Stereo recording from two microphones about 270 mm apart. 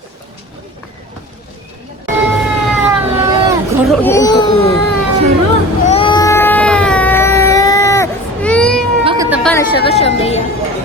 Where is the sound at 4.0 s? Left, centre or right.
Centre.